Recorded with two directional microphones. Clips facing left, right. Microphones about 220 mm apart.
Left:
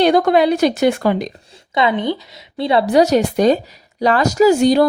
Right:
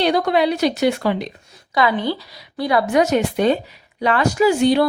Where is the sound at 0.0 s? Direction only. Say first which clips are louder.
Left 4 dB; 50° left (ahead or behind).